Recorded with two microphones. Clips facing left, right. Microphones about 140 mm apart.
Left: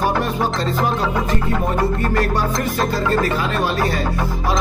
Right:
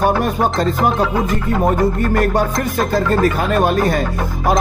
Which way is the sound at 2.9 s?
50° right (ahead or behind).